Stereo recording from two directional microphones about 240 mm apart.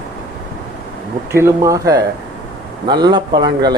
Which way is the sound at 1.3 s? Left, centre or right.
Centre.